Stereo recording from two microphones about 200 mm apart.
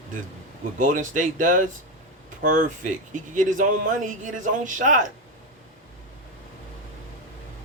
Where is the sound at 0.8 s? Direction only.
40° right (ahead or behind).